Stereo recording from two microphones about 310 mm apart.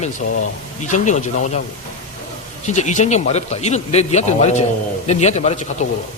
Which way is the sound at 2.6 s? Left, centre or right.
Left.